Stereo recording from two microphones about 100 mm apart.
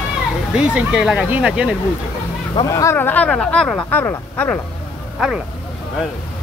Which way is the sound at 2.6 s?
35° left (ahead or behind).